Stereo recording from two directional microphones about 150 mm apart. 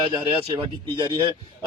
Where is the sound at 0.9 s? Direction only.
30° right (ahead or behind).